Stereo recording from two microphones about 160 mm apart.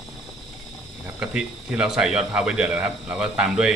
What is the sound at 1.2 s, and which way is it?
Speech, 5° right (ahead or behind).